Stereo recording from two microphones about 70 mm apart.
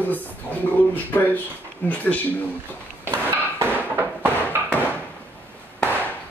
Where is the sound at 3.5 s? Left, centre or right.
Right.